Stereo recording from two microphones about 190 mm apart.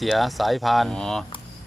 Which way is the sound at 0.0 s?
Centre (ahead or behind).